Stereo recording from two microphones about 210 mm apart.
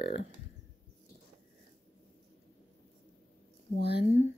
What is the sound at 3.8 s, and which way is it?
Speech, 50° left (ahead or behind).